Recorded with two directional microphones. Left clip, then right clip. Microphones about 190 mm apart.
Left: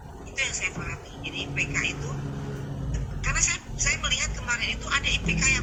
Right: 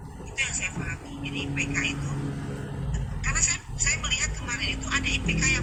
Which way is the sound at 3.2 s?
15° left (ahead or behind).